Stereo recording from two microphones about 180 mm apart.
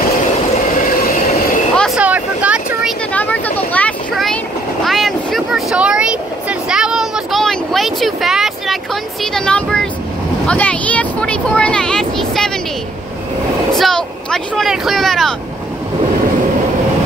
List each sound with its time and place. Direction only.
0.7 s train: 50° left (ahead or behind)
2.0 s vehicle: 10° right (ahead or behind)
3.1 s vehicle: 10° left (ahead or behind)
9.2 s speech: 5° left (ahead or behind)
13.7 s speech: centre (ahead or behind)